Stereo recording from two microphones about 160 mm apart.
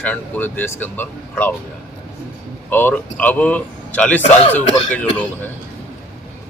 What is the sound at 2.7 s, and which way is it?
Speech, 10° left (ahead or behind).